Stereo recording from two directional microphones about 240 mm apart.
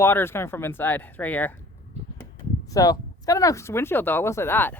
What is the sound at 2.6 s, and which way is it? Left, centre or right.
A woman's voice, centre.